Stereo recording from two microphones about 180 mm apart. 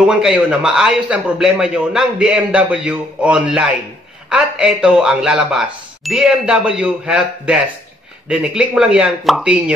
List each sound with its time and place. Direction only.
0.0 s a man's voice: 5° right (ahead or behind)